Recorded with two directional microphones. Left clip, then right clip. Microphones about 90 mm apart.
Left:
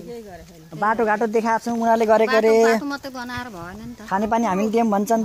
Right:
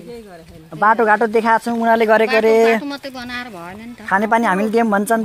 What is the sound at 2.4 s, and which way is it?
Speech, 20° left (ahead or behind).